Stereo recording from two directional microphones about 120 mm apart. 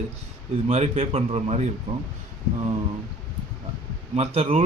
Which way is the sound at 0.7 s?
60° right (ahead or behind).